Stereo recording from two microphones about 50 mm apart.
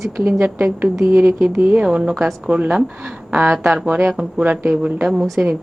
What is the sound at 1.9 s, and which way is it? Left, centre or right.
Speech, centre.